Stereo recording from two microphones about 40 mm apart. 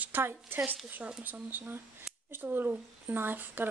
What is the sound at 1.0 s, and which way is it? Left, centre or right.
Speech, right.